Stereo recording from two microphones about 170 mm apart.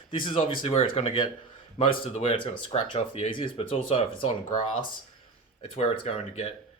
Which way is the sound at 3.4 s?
30° left (ahead or behind).